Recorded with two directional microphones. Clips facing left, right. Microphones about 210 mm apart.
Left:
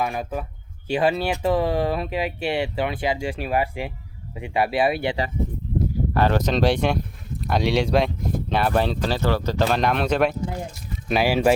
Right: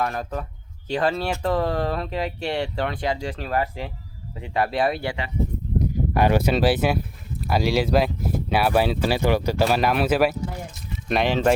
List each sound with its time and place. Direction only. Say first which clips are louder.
0.0 s speech: left 1 dB; 10° left (ahead or behind)
5.8 s speech: even; 15° right (ahead or behind)
11.1 s speech: left 1 dB; 5° left (ahead or behind)